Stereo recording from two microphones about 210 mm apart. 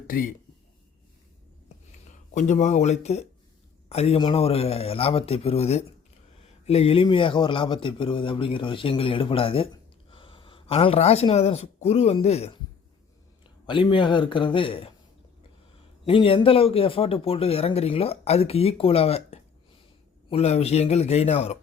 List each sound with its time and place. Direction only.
0.1 s speech: 40° left (ahead or behind)
2.3 s speech: 35° left (ahead or behind)
16.0 s speech: 25° left (ahead or behind)